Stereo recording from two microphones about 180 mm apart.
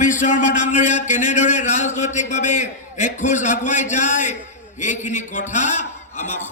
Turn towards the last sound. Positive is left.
turn(degrees=40)  # may be behind; listen again after turning